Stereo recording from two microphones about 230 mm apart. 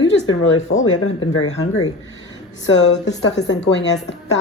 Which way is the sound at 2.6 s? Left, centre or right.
Left.